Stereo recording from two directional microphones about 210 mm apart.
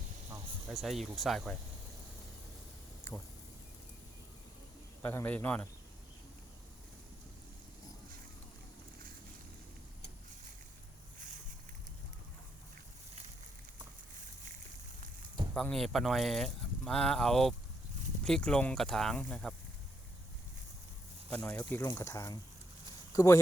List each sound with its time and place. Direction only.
0.7 s speech: centre (ahead or behind)
3.0 s a sound: 65° left (ahead or behind)
5.0 s speech: 10° left (ahead or behind)
15.5 s speech: centre (ahead or behind)
21.2 s speech: 5° left (ahead or behind)